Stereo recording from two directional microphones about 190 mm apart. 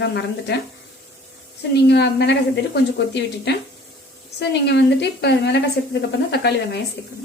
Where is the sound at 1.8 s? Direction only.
60° left (ahead or behind).